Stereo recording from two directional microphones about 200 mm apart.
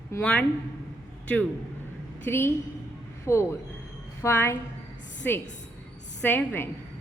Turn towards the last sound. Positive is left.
turn(degrees=10)  # may be behind; listen again after turning